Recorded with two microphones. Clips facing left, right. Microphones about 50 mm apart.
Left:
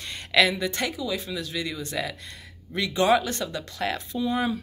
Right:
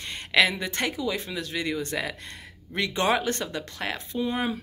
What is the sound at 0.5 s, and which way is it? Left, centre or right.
Speech, right.